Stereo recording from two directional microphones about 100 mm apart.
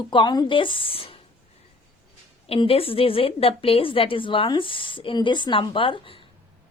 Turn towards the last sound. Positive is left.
turn(degrees=60)  # may be behind; listen again after turning